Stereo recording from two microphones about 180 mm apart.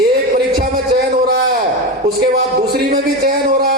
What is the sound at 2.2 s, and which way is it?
Music, 65° right (ahead or behind).